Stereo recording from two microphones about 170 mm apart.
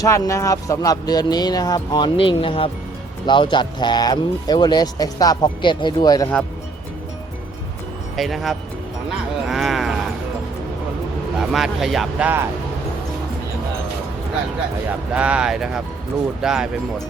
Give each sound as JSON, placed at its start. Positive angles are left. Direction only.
{"t": 0.0, "sound": "speech", "side_deg": 20}
{"t": 8.1, "sound": "speech", "side_deg": 0}
{"t": 9.0, "sound": "a sound", "side_deg": 0}
{"t": 11.3, "sound": "speech", "side_deg": 0}
{"t": 15.1, "sound": "speech", "side_deg": -5}